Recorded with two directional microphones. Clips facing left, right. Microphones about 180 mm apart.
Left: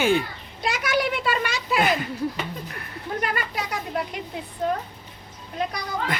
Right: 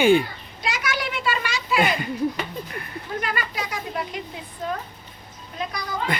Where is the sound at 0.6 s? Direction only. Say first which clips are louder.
Left 4 dB; 55° left (ahead or behind).